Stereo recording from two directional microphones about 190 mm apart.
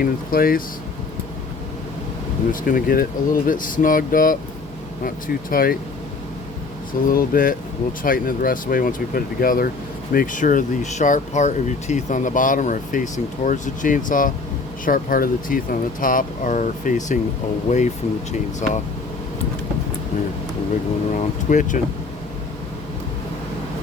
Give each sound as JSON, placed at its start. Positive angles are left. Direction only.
{"t": 0.0, "sound": "speech", "side_deg": 50}
{"t": 2.5, "sound": "speech", "side_deg": 45}
{"t": 7.1, "sound": "speech", "side_deg": 50}
{"t": 21.1, "sound": "speech", "side_deg": 40}